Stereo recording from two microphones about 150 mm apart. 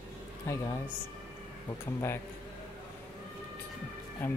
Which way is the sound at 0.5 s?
20° left (ahead or behind).